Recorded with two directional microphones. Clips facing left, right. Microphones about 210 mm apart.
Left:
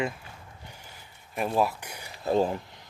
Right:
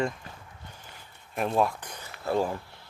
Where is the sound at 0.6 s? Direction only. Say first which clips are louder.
Even; 10° left (ahead or behind).